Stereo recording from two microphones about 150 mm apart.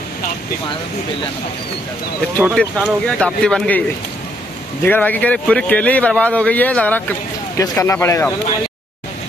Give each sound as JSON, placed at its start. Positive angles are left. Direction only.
{"t": 2.4, "sound": "speech", "side_deg": -5}
{"t": 4.8, "sound": "speech", "side_deg": 10}